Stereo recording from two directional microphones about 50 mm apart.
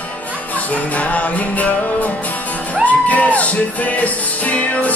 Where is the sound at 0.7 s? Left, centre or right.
Left.